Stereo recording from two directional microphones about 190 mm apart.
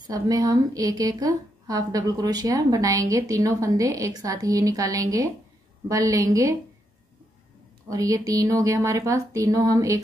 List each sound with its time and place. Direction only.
0.0 s a woman's voice: 20° right (ahead or behind)
7.9 s speech: 15° right (ahead or behind)